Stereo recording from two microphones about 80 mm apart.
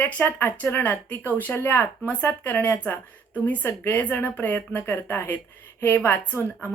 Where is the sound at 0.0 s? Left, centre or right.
Left.